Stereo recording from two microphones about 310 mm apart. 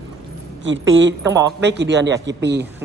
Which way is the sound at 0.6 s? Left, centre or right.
Right.